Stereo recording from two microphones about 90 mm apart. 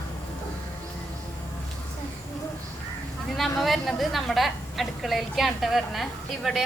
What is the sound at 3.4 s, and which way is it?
A woman's voice, centre (ahead or behind).